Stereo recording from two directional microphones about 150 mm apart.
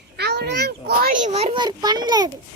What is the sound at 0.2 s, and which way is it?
A child's voice, 90° right.